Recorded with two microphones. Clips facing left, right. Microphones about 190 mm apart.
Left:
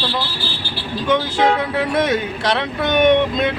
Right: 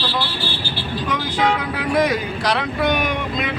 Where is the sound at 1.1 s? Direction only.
25° left (ahead or behind).